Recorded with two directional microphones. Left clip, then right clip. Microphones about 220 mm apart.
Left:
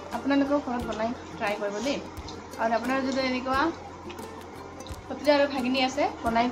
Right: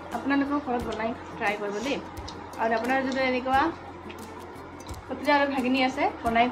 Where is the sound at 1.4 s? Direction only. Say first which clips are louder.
Even; 10° left (ahead or behind).